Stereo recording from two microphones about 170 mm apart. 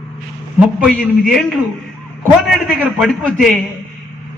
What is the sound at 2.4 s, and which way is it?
A man's voice, 5° right (ahead or behind).